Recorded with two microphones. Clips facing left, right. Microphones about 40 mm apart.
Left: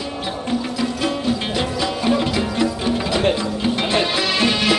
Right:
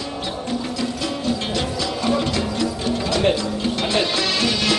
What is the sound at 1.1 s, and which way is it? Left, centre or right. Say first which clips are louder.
Music: left 2 dB; centre.